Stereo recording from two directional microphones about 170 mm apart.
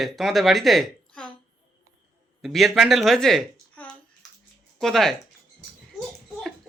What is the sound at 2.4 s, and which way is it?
A woman's voice, centre (ahead or behind).